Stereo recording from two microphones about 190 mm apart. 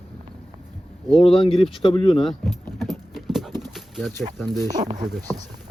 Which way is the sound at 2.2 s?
Centre (ahead or behind).